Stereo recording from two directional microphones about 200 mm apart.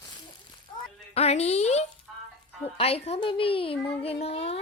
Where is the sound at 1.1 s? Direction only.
30° left (ahead or behind).